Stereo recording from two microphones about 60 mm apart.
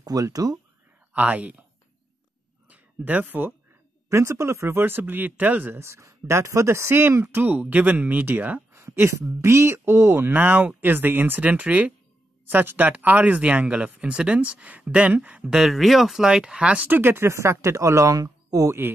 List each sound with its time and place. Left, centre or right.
0.0 s speech: right
1.1 s speech: right
2.7 s speech: right
4.1 s speech: right
5.8 s speech: right
9.4 s speech: right
10.3 s speech: right
15.6 s speech: centre
16.8 s speech: right